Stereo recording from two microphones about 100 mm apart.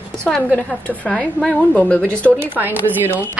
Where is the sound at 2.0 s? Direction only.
20° right (ahead or behind).